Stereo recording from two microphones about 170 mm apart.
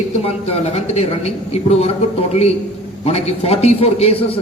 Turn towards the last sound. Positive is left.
turn(degrees=35)  # may be behind; listen again after turning